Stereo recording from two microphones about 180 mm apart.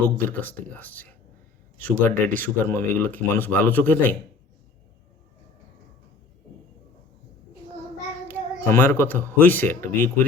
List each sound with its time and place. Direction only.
0.3 s speech: 10° left (ahead or behind)
2.3 s speech: 50° right (ahead or behind)
2.6 s speech: 10° left (ahead or behind)
8.3 s speech: 10° left (ahead or behind)